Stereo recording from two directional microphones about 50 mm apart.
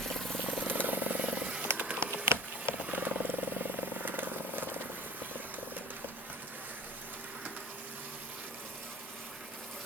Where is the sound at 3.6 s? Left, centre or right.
Right.